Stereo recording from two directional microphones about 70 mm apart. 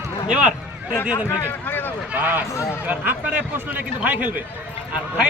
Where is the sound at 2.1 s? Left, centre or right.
Right.